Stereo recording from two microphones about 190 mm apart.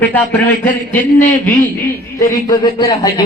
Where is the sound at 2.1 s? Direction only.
20° left (ahead or behind).